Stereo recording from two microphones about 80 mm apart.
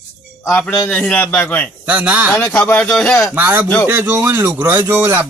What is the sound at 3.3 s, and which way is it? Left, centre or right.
Speech, right.